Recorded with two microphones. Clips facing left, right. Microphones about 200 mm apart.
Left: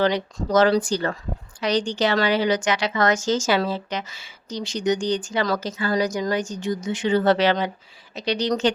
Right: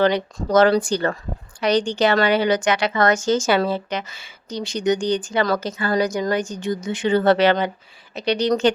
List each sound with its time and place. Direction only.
0.0 s speech: 55° right (ahead or behind)